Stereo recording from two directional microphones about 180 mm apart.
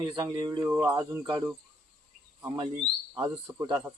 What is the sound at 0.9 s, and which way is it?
Speech, 25° right (ahead or behind).